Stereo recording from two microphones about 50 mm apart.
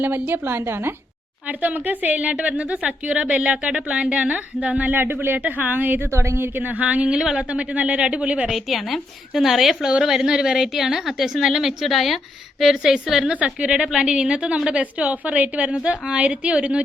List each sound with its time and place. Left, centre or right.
0.0 s a woman's voice: right
1.5 s a woman's voice: right
4.9 s a woman's voice: right
6.1 s a woman's voice: right
6.6 s a woman's voice: right
6.8 s a woman's voice: right
7.2 s a woman's voice: centre
7.5 s a woman's voice: right
8.4 s a woman's voice: centre
13.3 s a woman's voice: right
14.8 s a woman's voice: right
15.7 s a woman's voice: centre